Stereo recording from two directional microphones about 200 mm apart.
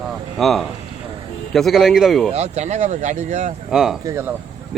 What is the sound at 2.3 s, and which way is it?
Speech, 35° right (ahead or behind).